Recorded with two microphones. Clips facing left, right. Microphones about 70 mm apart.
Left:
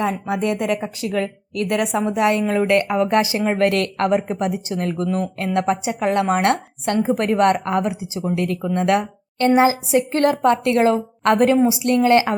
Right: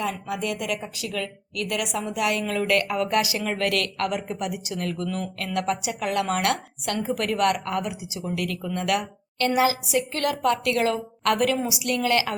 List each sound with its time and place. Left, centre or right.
0.0 s a woman's voice: left